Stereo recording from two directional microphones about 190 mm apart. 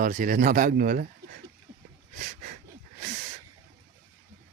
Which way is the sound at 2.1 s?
45° right (ahead or behind).